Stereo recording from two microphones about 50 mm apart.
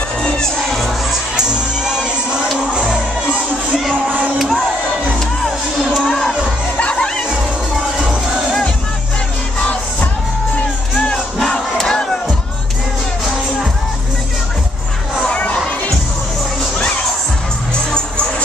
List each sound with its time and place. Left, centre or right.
5.9 s crowd: centre
6.8 s music: left
11.3 s crowd: centre
15.2 s children shouting: left